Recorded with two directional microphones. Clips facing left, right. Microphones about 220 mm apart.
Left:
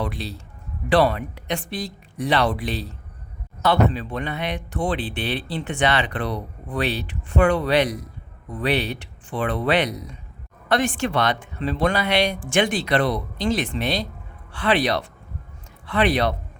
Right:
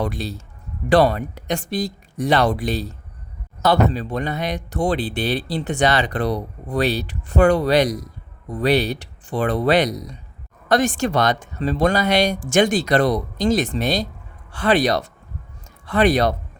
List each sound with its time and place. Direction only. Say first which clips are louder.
0.0 s speech: right 4 dB; 45° right (ahead or behind)